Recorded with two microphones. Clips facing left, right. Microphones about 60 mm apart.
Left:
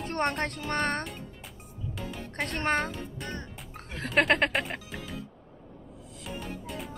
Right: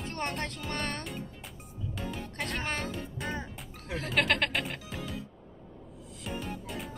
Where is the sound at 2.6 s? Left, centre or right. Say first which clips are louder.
Left 11 dB; left.